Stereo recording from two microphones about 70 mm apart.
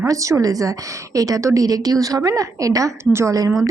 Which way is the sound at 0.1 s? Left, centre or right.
Right.